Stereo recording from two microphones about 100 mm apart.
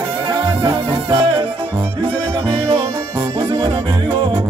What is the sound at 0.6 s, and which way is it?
Music, 55° right (ahead or behind).